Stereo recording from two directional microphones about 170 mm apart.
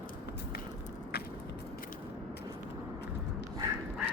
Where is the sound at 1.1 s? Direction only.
70° left (ahead or behind).